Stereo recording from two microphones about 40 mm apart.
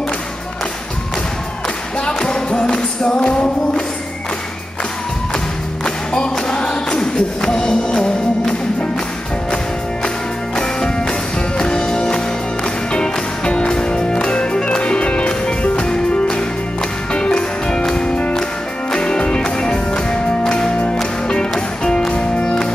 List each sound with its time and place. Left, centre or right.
2.0 s music: left
5.9 s music: centre
10.0 s music: centre